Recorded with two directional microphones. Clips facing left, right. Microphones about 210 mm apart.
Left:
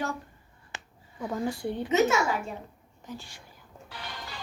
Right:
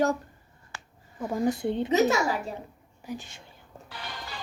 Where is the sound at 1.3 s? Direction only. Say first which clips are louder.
Right 4 dB; 20° right (ahead or behind).